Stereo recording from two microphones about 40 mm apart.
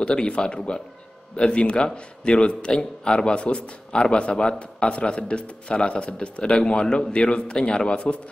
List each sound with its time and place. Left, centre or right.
0.0 s a man's voice: left